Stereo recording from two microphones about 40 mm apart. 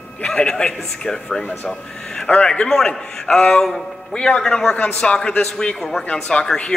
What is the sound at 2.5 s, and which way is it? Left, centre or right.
A man's voice, centre.